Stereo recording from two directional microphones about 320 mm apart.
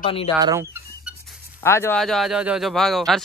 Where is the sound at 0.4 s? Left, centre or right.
Centre.